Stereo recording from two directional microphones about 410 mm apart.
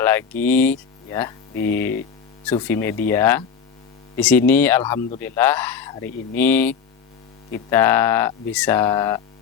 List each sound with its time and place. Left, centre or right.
0.0 s speech: centre